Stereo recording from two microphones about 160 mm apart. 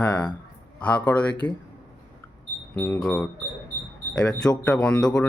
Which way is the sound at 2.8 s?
10° left (ahead or behind).